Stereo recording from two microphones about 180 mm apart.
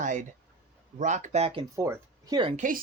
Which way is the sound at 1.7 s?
15° right (ahead or behind).